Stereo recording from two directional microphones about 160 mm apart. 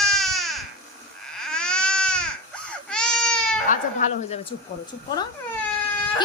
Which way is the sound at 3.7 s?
50° left (ahead or behind).